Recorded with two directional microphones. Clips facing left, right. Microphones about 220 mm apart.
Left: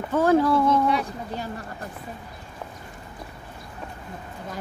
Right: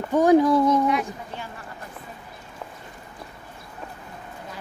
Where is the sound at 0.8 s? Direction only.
35° left (ahead or behind).